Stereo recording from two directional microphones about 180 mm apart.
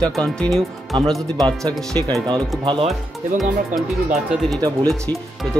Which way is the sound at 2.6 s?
30° right (ahead or behind).